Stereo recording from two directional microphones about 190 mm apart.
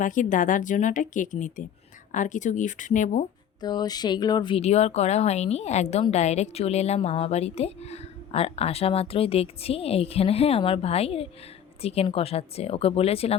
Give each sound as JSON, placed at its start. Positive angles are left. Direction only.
{"t": 0.0, "sound": "speech", "side_deg": 45}
{"t": 3.6, "sound": "speech", "side_deg": 20}